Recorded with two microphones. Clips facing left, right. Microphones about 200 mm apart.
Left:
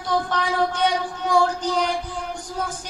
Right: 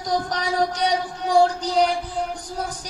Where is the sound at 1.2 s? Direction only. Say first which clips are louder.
Right 2 dB; 35° right (ahead or behind).